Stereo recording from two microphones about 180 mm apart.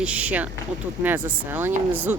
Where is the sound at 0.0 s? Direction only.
5° right (ahead or behind).